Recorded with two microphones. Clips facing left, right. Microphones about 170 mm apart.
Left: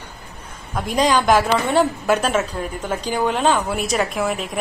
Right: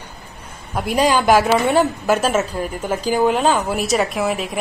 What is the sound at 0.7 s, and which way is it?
A woman's voice, 10° right (ahead or behind).